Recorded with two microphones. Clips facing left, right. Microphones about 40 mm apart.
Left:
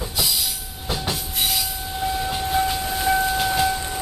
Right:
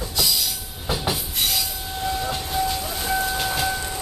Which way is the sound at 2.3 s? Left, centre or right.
Centre.